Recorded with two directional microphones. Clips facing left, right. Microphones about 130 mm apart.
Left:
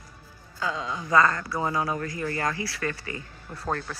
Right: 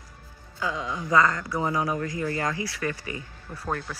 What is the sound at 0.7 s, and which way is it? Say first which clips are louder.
Speech: right 1 dB; 25° left (ahead or behind).